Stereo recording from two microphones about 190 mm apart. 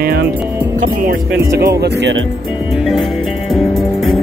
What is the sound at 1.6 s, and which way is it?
Speech, 60° right (ahead or behind).